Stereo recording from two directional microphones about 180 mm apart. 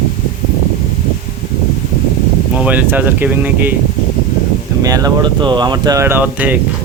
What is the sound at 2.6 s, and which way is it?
Speech, 10° right (ahead or behind).